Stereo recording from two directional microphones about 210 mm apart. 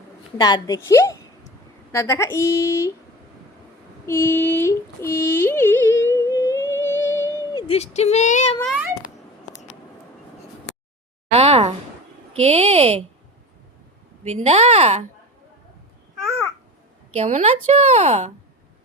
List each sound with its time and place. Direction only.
0.3 s speech: 20° left (ahead or behind)
4.0 s a sound: 10° left (ahead or behind)
7.7 s speech: 30° left (ahead or behind)
8.7 s a sound: 5° right (ahead or behind)
11.3 s a woman's voice: 30° right (ahead or behind)
14.3 s speech: 35° right (ahead or behind)
17.2 s speech: 35° right (ahead or behind)